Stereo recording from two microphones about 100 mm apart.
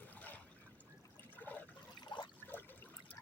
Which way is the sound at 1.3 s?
15° left (ahead or behind).